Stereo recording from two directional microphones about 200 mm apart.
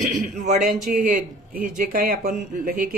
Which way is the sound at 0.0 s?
35° right (ahead or behind).